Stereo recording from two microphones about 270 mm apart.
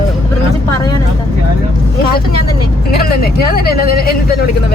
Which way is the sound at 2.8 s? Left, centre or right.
Left.